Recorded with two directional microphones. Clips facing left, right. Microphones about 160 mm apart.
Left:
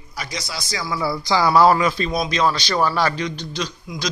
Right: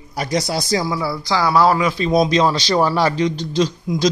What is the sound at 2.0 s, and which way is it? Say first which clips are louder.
A man's voice: right 5 dB; 25° right (ahead or behind).